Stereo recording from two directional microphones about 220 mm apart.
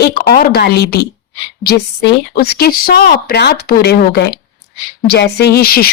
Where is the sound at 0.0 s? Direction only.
45° left (ahead or behind).